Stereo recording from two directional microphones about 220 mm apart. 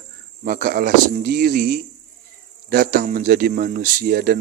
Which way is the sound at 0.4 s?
40° right (ahead or behind).